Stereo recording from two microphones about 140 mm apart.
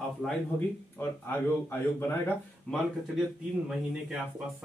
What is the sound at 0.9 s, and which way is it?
Speech, 15° left (ahead or behind).